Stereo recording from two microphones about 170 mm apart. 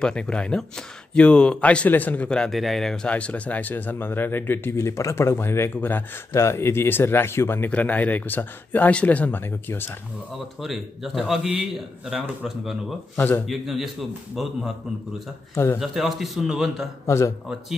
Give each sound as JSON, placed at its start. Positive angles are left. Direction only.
{"t": 0.0, "sound": "speech", "side_deg": 5}
{"t": 10.6, "sound": "a man's voice", "side_deg": 0}
{"t": 13.1, "sound": "speech", "side_deg": 10}
{"t": 13.5, "sound": "a man's voice", "side_deg": 0}
{"t": 15.5, "sound": "speech", "side_deg": 15}
{"t": 15.8, "sound": "a man's voice", "side_deg": 0}
{"t": 17.0, "sound": "speech", "side_deg": 15}